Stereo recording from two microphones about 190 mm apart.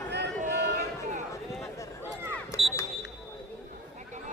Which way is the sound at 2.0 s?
10° right (ahead or behind).